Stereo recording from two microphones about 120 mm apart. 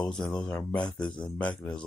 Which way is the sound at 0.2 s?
5° left (ahead or behind).